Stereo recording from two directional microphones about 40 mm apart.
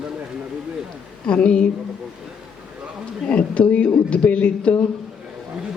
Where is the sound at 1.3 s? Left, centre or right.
Left.